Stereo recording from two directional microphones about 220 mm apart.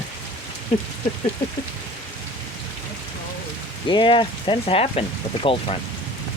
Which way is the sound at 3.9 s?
20° left (ahead or behind).